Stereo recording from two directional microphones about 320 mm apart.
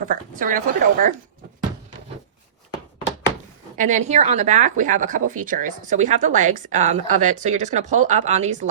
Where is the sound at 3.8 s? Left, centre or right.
Right.